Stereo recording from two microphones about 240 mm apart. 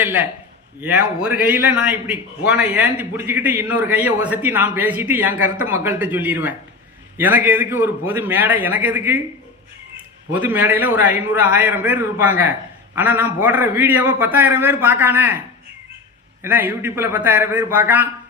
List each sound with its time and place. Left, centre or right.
0.0 s a man's voice: centre
10.3 s a man's voice: centre
16.4 s a man's voice: centre